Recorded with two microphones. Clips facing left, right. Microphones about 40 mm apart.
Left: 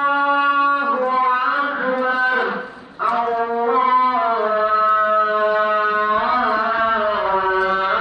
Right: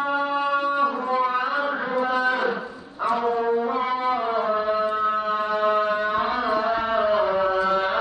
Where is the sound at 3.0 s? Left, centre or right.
Centre.